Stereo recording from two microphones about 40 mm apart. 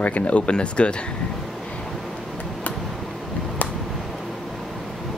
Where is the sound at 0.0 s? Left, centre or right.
Left.